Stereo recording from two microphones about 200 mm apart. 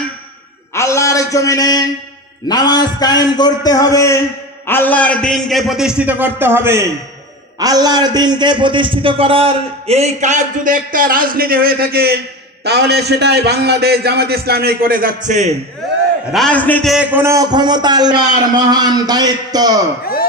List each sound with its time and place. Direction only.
0.7 s a sound: 15° left (ahead or behind)
2.4 s a man's voice: 20° left (ahead or behind); by 15.5 s 35° right (ahead or behind)
16.3 s a man's voice: centre (ahead or behind)
16.9 s a man's voice: 10° right (ahead or behind)